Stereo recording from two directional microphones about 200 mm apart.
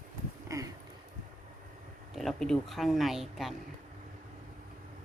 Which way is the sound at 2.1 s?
Centre (ahead or behind).